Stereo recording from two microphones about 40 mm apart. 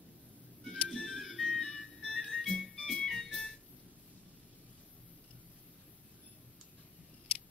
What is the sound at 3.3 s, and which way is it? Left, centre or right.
Organ, centre.